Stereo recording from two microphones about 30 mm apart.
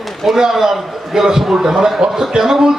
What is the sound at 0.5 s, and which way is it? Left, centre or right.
A man's voice, centre.